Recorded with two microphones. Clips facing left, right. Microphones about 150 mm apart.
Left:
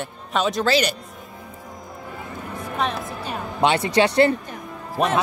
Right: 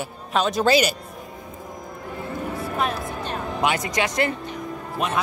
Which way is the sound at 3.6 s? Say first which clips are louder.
Left 6 dB; 30° left (ahead or behind).